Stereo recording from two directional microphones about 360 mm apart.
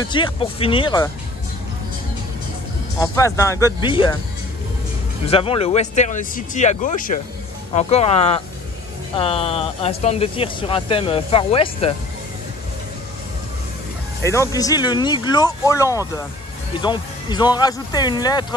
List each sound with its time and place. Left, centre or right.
0.0 s speech: centre
3.0 s speech: centre
5.2 s speech: centre
14.2 s speech: centre